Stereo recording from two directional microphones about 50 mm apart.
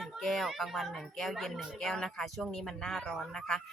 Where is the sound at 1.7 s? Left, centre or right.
Centre.